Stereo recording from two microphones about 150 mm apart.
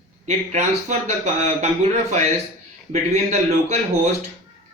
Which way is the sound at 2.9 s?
50° right (ahead or behind).